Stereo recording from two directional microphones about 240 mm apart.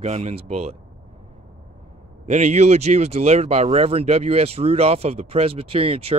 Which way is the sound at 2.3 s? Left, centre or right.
Right.